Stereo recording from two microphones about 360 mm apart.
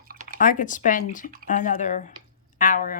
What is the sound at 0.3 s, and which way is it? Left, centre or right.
Speech, left.